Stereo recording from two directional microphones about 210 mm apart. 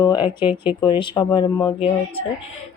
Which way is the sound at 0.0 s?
20° left (ahead or behind).